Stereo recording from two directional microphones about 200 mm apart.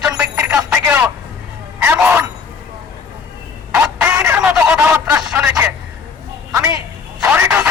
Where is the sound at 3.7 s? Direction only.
5° right (ahead or behind).